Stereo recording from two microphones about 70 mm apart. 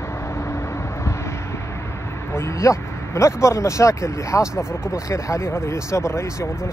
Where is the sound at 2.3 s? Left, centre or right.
Left.